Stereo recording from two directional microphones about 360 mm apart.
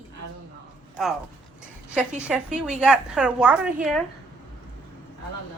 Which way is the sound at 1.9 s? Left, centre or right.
Centre.